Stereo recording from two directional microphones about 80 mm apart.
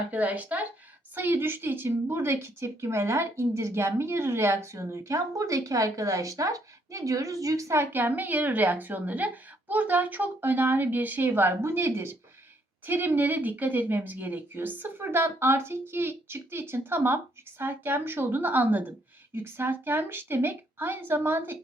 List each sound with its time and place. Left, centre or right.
0.1 s a woman's voice: centre